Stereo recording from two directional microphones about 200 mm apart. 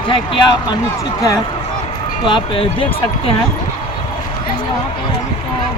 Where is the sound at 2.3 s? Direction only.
25° left (ahead or behind).